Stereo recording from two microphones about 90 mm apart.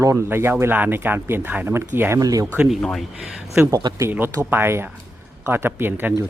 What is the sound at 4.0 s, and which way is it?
Speech, 25° right (ahead or behind).